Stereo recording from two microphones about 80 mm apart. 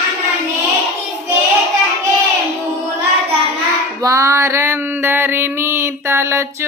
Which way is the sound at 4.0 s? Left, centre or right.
Right.